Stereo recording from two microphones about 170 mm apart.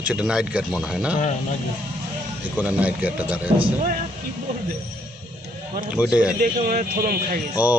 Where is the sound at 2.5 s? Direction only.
10° right (ahead or behind).